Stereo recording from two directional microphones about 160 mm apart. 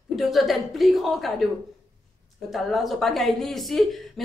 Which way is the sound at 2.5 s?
Centre (ahead or behind).